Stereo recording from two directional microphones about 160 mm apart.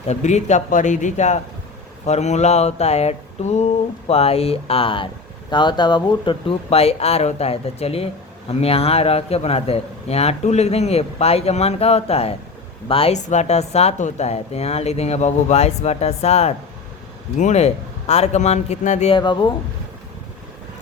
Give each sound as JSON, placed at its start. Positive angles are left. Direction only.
{"t": 0.1, "sound": "a man's voice", "side_deg": 45}
{"t": 19.1, "sound": "speech", "side_deg": 30}